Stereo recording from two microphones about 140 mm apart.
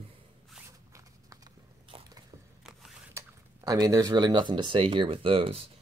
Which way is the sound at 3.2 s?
20° right (ahead or behind).